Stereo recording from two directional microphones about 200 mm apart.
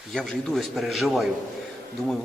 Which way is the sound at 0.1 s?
Centre (ahead or behind).